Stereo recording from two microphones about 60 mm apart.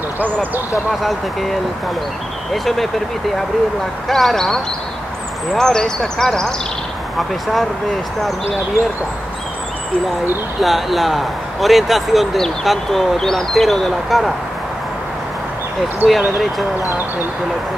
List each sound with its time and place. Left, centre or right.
1.0 s speech: centre
4.1 s speech: centre
8.8 s speech: right
10.6 s speech: centre
16.1 s speech: centre